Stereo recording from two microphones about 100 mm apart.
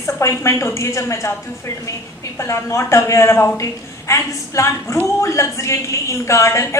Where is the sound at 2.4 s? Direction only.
30° left (ahead or behind).